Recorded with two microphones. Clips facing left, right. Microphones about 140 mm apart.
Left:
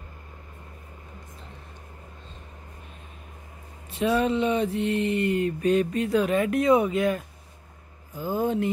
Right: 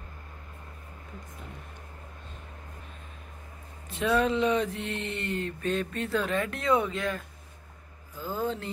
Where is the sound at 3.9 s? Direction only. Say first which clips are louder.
Left 2 dB; centre (ahead or behind).